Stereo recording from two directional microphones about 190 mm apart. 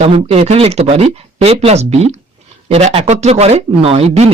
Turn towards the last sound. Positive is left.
turn(degrees=-30)  # may be behind; listen again after turning